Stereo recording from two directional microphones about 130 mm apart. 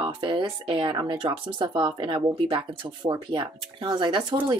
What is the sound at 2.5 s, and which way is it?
Speech, 30° right (ahead or behind).